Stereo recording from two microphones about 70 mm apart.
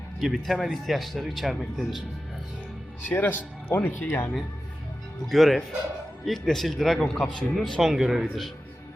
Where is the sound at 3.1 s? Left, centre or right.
Left.